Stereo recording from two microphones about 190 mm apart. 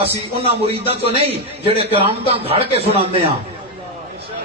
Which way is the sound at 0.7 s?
30° right (ahead or behind).